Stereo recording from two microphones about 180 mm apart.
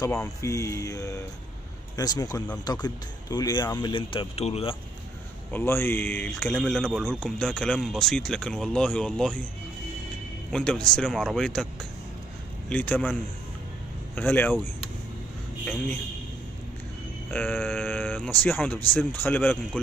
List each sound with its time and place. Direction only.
0.0 s speech: 15° left (ahead or behind); by 4.7 s 35° left (ahead or behind)
5.5 s a man's voice: 10° left (ahead or behind)
10.5 s a man's voice: 5° left (ahead or behind)
12.6 s speech: 10° left (ahead or behind)
15.6 s a man's voice: 10° left (ahead or behind)
17.3 s sheep: 10° left (ahead or behind)
17.6 s speech: 10° left (ahead or behind)